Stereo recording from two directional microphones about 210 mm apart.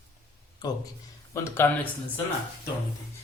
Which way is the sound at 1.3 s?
10° left (ahead or behind).